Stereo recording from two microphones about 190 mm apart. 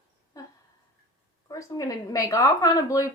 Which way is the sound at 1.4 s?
15° left (ahead or behind).